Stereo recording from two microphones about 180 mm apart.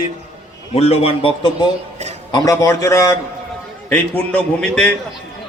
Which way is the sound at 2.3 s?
20° left (ahead or behind).